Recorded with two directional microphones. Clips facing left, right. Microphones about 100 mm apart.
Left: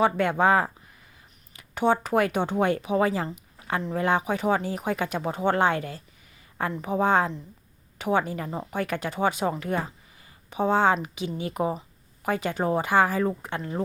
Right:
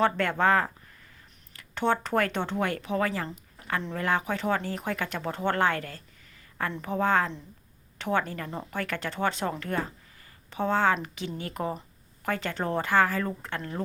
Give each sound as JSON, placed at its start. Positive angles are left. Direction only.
{"t": 0.0, "sound": "speech", "side_deg": 15}
{"t": 3.3, "sound": "a sound", "side_deg": 20}
{"t": 3.9, "sound": "speech", "side_deg": 20}